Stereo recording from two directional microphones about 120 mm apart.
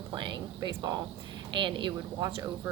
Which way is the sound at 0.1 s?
40° right (ahead or behind).